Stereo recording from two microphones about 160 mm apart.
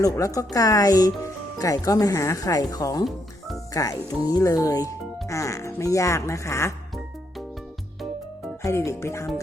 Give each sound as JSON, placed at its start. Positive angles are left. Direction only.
{"t": 0.0, "sound": "speech", "side_deg": 20}
{"t": 8.6, "sound": "speech", "side_deg": 20}